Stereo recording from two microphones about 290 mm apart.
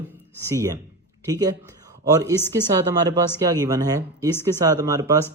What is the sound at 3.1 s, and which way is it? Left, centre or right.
Speech, centre.